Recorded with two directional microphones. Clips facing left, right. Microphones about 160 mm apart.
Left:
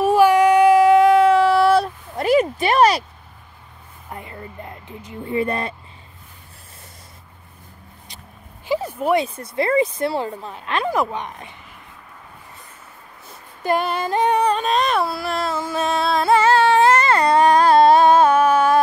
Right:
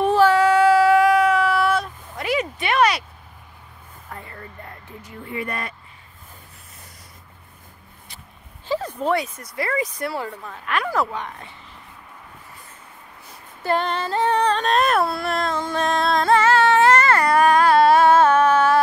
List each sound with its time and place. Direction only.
0.0 s child singing: 10° left (ahead or behind); by 3.1 s 35° left (ahead or behind)
4.1 s a sound: 20° left (ahead or behind)
8.6 s a sound: 10° left (ahead or behind)
9.1 s speech: 30° left (ahead or behind)
13.6 s female singing: 15° left (ahead or behind); by 17.8 s 35° left (ahead or behind)
17.8 s music: 20° left (ahead or behind)